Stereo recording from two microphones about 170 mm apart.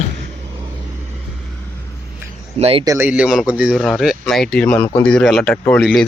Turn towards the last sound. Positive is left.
turn(degrees=5)  # may be behind; listen again after turning